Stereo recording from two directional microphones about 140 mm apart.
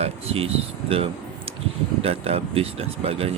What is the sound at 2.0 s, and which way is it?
Speech, 45° right (ahead or behind).